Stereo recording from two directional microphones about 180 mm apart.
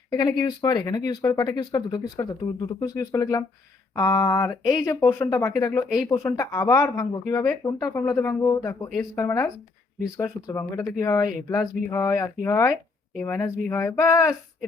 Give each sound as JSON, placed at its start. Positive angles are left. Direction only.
{"t": 0.1, "sound": "speech", "side_deg": 20}